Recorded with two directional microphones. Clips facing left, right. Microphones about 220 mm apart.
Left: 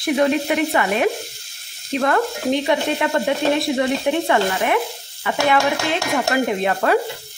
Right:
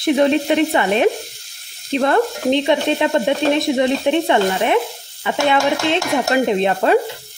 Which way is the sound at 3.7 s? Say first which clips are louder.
Right 3 dB; 20° right (ahead or behind).